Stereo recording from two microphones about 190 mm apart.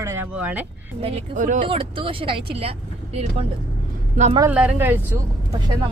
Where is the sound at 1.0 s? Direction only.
30° right (ahead or behind).